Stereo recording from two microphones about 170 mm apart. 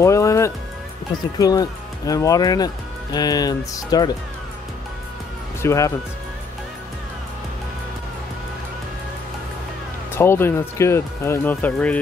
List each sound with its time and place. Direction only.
0.0 s music: 20° left (ahead or behind)
1.4 s speech: 20° left (ahead or behind)
5.6 s speech: 15° left (ahead or behind)
10.1 s speech: 15° left (ahead or behind)